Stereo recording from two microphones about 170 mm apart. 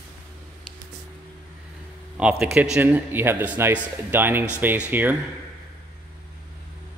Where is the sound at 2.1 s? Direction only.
5° right (ahead or behind).